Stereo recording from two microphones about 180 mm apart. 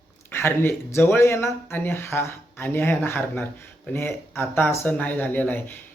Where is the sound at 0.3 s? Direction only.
10° left (ahead or behind).